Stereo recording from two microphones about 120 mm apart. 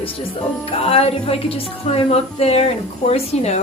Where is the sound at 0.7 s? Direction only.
55° left (ahead or behind).